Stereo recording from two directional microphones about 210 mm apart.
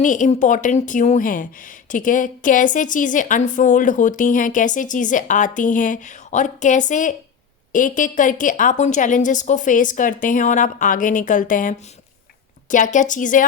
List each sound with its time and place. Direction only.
0.0 s a woman's voice: 35° left (ahead or behind)